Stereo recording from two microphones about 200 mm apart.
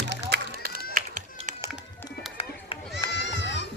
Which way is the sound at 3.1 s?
60° left (ahead or behind).